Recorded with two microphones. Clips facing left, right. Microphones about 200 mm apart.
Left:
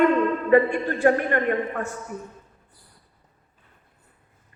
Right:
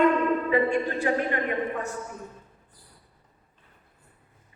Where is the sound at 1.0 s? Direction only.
50° left (ahead or behind).